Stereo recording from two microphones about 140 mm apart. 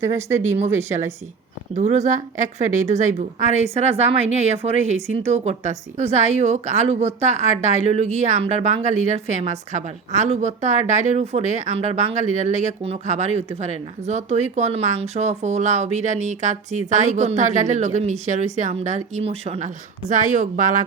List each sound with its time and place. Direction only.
0.0 s speech: 20° right (ahead or behind)
1.7 s a woman's voice: 55° right (ahead or behind); by 20.8 s 70° right (ahead or behind)